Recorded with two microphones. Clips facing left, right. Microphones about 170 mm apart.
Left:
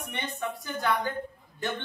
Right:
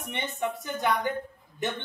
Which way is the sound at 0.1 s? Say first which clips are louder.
Right 4 dB; 25° right (ahead or behind).